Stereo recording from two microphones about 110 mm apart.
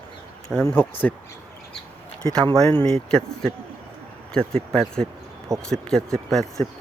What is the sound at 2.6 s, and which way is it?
Speech, 10° left (ahead or behind).